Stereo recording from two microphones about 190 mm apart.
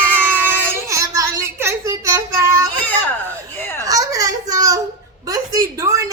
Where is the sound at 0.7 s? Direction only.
15° right (ahead or behind).